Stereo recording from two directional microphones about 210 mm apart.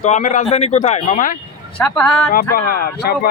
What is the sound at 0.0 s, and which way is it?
Speech, 35° left (ahead or behind).